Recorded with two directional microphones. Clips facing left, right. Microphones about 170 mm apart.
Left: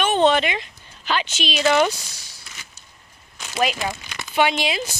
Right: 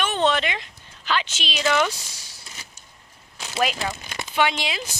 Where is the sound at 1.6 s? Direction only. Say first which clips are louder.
Left 4 dB; 30° left (ahead or behind).